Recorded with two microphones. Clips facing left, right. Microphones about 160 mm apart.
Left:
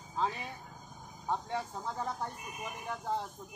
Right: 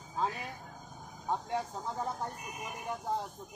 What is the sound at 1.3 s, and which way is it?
Speech, 15° right (ahead or behind).